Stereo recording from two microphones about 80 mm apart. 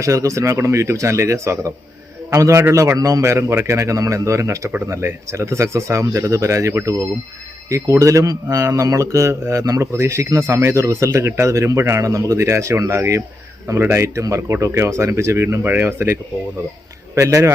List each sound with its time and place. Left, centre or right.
0.0 s speech: right
17.2 s speech: right